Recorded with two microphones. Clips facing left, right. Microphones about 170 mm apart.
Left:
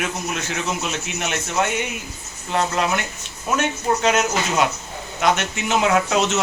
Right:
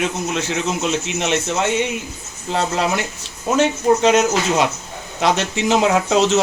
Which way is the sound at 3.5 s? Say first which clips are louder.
Right 6 dB; 30° right (ahead or behind).